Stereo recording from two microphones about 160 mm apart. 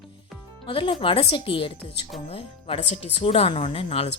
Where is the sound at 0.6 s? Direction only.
35° left (ahead or behind).